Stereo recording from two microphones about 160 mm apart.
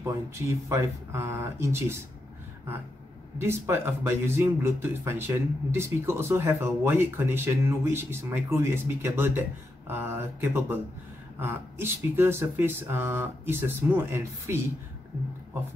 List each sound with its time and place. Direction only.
0.0 s speech: 15° right (ahead or behind)
3.3 s speech: 15° right (ahead or behind)